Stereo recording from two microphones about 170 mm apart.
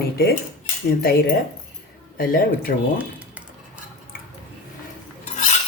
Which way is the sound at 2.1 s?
55° left (ahead or behind).